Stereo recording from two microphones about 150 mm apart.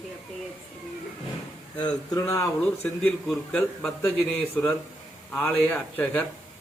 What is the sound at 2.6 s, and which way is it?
A man's voice, 10° left (ahead or behind).